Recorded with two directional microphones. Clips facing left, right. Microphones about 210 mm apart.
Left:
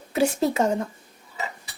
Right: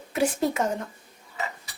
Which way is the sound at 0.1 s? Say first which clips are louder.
Left 3 dB; 25° left (ahead or behind).